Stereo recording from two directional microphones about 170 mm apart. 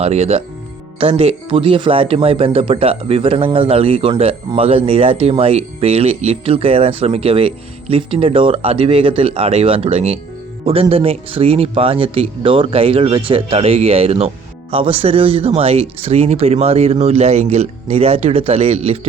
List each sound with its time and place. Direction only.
0.0 s speech: 40° right (ahead or behind)